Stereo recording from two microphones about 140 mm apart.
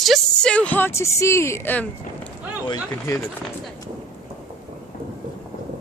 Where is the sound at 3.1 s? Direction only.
25° left (ahead or behind).